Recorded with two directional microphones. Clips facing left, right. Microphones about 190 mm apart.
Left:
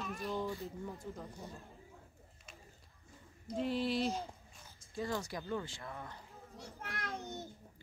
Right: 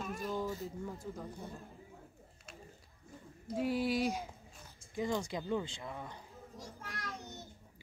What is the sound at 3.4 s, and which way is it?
Speech, 10° right (ahead or behind).